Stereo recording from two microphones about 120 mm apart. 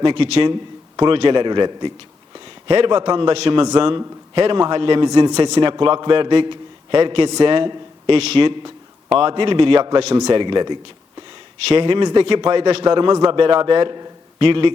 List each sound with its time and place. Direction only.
0.0 s a man's voice: 45° right (ahead or behind)
5.0 s a man's voice: 35° right (ahead or behind)
10.2 s a man's voice: 35° right (ahead or behind)